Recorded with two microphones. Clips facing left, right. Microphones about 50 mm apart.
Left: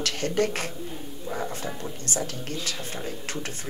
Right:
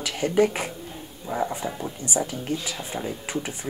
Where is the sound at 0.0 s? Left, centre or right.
Centre.